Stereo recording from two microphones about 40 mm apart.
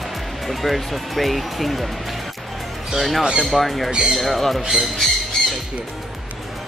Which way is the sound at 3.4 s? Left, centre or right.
Centre.